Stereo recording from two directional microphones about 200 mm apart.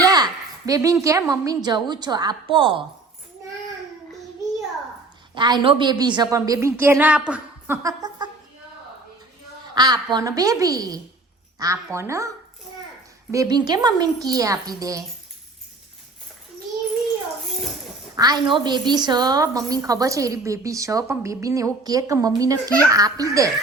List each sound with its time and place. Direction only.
0.0 s a sound: 20° right (ahead or behind)
1.3 s a woman's voice: 20° right (ahead or behind)
5.3 s a woman's voice: 20° right (ahead or behind); by 7.8 s 5° right (ahead or behind)
7.8 s a sound: 20° right (ahead or behind)
9.7 s a woman's voice: 20° right (ahead or behind)
13.3 s a woman's voice: 15° right (ahead or behind)
18.2 s a woman's voice: 20° right (ahead or behind)